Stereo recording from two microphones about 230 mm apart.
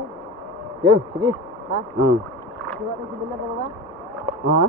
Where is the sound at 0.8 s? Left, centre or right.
Centre.